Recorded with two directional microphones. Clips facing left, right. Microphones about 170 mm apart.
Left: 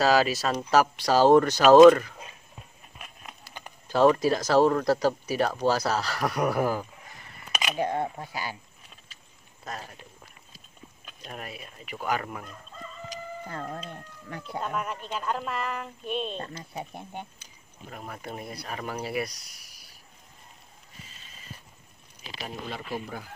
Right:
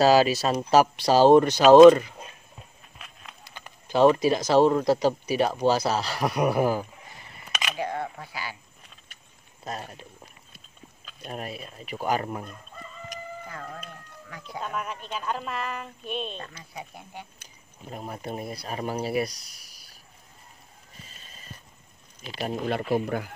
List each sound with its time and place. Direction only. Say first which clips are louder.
0.0 s speech: right 4 dB; 30° right (ahead or behind)
3.9 s speech: right 2 dB; 20° right (ahead or behind)
7.9 s speech: left 3 dB; 20° left (ahead or behind)
8.3 s speech: left 2 dB; 45° left (ahead or behind)
9.7 s speech: right 3 dB; 25° right (ahead or behind)
11.3 s speech: right 5 dB; 30° right (ahead or behind)
13.5 s speech: left 3 dB; 35° left (ahead or behind)
14.7 s speech: right 1 dB; centre (ahead or behind)
16.3 s speech: left 4 dB; 35° left (ahead or behind)
17.8 s speech: right 4 dB; 25° right (ahead or behind)
22.4 s speech: right 9 dB; 60° right (ahead or behind)